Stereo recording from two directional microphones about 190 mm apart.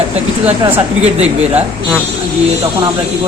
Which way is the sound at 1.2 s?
35° right (ahead or behind).